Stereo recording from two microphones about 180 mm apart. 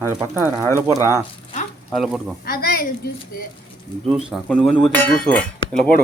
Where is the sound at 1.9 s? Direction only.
Centre (ahead or behind).